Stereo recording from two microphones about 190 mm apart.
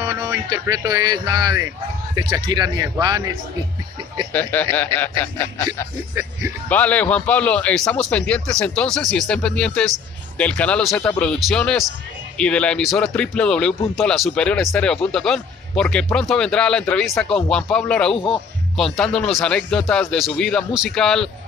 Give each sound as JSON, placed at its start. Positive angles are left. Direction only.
{"t": 0.0, "sound": "music", "side_deg": -20}
{"t": 2.1, "sound": "speech", "side_deg": -20}
{"t": 4.3, "sound": "speech", "side_deg": 10}
{"t": 6.7, "sound": "speech", "side_deg": 10}
{"t": 18.1, "sound": "speech", "side_deg": 30}
{"t": 18.8, "sound": "speech", "side_deg": 0}